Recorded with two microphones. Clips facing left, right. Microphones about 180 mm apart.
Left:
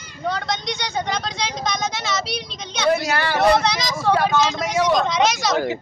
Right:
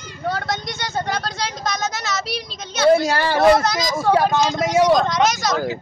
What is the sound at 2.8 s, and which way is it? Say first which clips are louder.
Speech: right 5 dB; 30° right (ahead or behind).